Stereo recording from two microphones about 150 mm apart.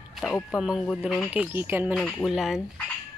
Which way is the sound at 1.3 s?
10° right (ahead or behind).